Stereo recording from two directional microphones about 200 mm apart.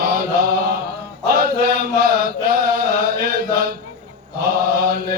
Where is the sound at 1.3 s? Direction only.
50° right (ahead or behind).